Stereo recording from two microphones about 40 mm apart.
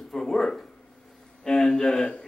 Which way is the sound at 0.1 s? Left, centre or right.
Centre.